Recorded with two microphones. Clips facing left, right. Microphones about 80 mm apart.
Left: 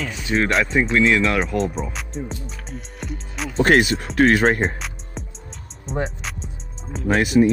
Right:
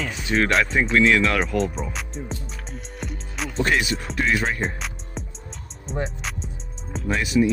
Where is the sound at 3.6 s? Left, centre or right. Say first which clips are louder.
Left 6 dB; left.